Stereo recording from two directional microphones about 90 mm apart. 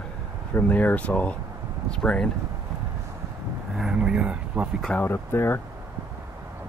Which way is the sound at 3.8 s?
10° right (ahead or behind).